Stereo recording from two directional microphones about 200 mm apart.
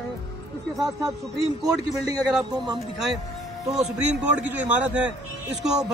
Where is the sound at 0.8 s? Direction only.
15° right (ahead or behind).